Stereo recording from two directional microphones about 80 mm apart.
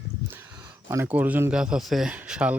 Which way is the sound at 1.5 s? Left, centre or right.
Centre.